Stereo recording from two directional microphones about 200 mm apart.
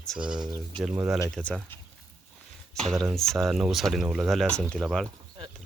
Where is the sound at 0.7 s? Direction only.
Centre (ahead or behind).